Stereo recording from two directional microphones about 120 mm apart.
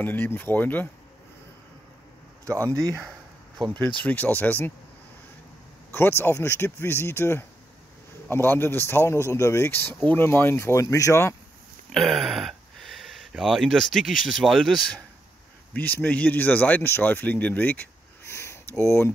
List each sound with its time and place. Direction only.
0.0 s speech: 15° left (ahead or behind)
2.4 s speech: 25° right (ahead or behind)
4.0 s speech: 15° left (ahead or behind)
5.9 s a man's voice: 20° left (ahead or behind)
11.9 s speech: centre (ahead or behind)
15.7 s speech: 15° left (ahead or behind)